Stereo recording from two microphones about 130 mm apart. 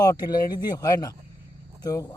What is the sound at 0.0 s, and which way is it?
Speech, 30° left (ahead or behind).